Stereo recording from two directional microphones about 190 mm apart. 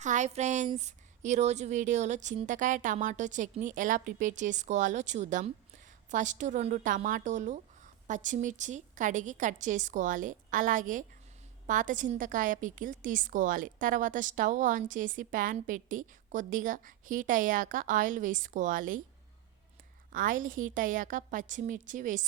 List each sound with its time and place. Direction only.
0.0 s a woman's voice: 40° right (ahead or behind)
20.1 s a woman's voice: 45° right (ahead or behind)